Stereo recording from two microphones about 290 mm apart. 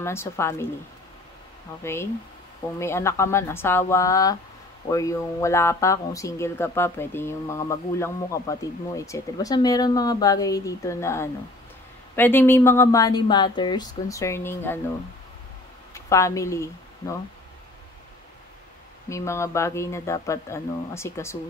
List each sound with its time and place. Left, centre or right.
0.0 s speech: centre
1.8 s speech: centre
15.9 s a woman's voice: centre
19.0 s speech: centre